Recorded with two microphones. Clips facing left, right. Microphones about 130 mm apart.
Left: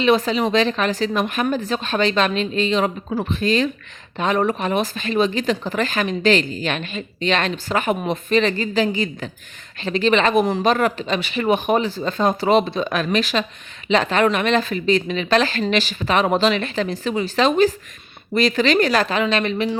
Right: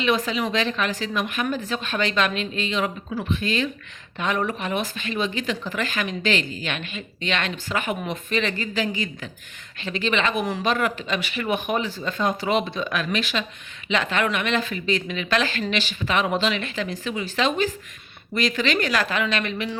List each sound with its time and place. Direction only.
0.0 s speech: 35° left (ahead or behind)